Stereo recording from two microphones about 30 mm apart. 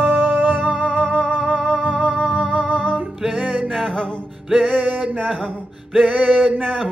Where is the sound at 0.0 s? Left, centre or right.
Right.